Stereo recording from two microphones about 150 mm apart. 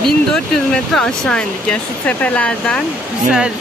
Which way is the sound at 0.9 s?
5° left (ahead or behind).